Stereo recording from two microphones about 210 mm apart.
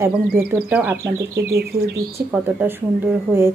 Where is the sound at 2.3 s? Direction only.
10° right (ahead or behind).